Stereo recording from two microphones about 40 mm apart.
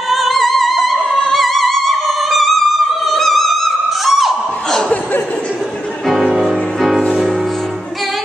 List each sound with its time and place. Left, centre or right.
0.1 s opera: centre
1.3 s music: centre
4.6 s a sound: centre
6.2 s music: centre